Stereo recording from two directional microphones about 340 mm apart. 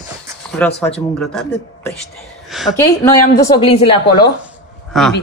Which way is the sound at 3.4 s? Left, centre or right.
Centre.